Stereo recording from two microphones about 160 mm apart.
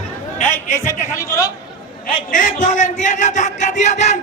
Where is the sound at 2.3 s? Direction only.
55° left (ahead or behind).